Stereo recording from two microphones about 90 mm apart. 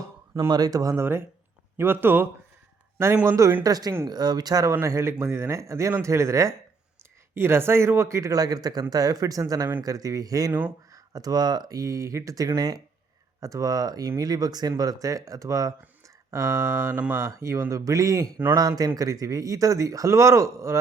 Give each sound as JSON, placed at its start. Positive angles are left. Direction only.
{"t": 0.3, "sound": "speech", "side_deg": -45}
{"t": 1.7, "sound": "a man's voice", "side_deg": -25}
{"t": 3.2, "sound": "speech", "side_deg": -35}
{"t": 4.9, "sound": "speech", "side_deg": -30}
{"t": 16.9, "sound": "speech", "side_deg": -15}
{"t": 17.2, "sound": "speech", "side_deg": -35}